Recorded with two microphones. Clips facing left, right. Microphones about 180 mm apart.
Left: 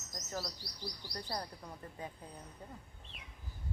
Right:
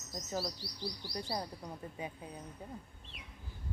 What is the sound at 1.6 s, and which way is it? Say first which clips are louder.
Speech: right 3 dB; 15° right (ahead or behind).